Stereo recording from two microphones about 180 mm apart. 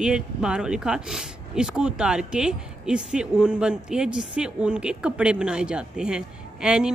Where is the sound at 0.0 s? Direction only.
5° right (ahead or behind).